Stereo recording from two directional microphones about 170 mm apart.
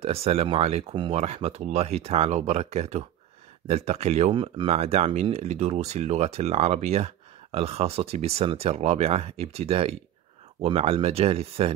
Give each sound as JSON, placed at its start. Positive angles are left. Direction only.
{"t": 0.0, "sound": "speech", "side_deg": -35}